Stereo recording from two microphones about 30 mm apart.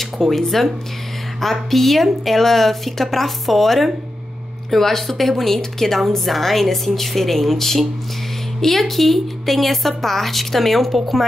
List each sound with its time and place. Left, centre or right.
0.0 s a woman's voice: centre